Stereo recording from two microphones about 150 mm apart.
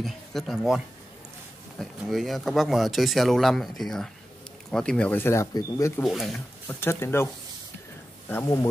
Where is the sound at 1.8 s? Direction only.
Centre (ahead or behind); by 5.9 s 20° left (ahead or behind).